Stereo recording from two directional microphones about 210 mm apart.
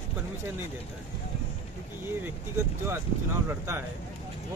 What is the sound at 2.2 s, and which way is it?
Speech, 10° right (ahead or behind).